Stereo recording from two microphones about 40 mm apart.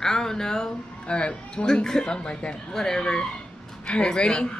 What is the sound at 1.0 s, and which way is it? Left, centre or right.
Speech, left.